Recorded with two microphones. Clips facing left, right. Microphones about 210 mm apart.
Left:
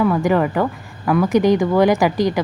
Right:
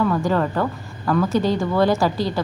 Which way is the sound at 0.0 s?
15° left (ahead or behind).